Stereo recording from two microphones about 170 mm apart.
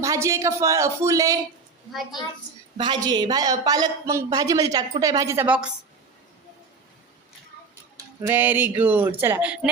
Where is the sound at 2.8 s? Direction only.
25° right (ahead or behind); by 5.7 s 5° right (ahead or behind).